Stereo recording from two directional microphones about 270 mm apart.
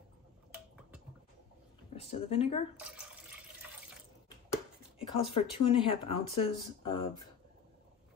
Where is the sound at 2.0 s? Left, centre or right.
Left.